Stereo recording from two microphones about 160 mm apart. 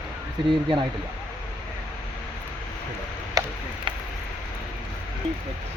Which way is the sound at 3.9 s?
30° right (ahead or behind).